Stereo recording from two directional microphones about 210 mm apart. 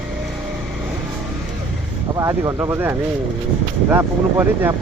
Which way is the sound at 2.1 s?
15° right (ahead or behind).